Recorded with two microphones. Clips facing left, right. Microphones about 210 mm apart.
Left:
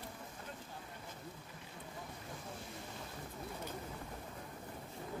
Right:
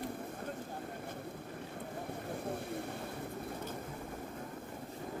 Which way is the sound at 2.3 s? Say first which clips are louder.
Right 12 dB; 60° right (ahead or behind).